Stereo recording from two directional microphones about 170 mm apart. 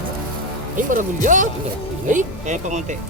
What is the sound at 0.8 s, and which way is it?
Speech, 50° right (ahead or behind).